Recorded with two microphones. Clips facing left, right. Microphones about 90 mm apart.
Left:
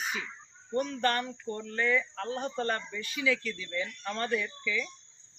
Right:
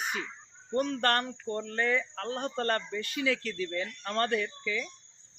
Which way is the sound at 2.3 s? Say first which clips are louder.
Right 2 dB; 60° right (ahead or behind).